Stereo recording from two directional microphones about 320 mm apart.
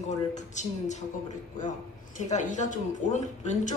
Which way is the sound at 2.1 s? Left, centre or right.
Left.